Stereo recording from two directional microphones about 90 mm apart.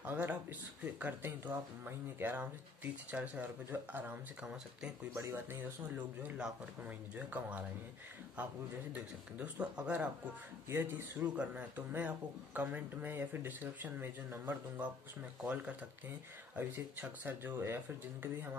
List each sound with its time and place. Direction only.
0.0 s speech: 20° right (ahead or behind)
5.3 s speech: 25° right (ahead or behind)
5.9 s speech: 15° right (ahead or behind)
8.9 s speech: 10° right (ahead or behind)